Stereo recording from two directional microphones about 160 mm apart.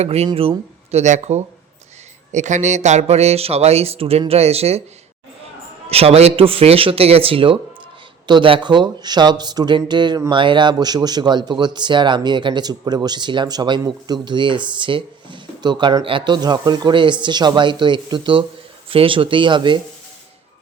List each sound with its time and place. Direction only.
0.0 s speech: 40° right (ahead or behind)
5.9 s speech: 40° right (ahead or behind)